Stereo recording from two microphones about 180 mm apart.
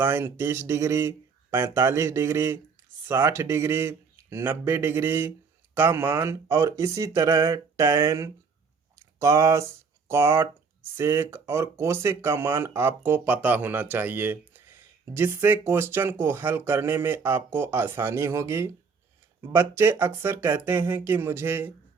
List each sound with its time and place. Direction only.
0.0 s speech: 10° right (ahead or behind)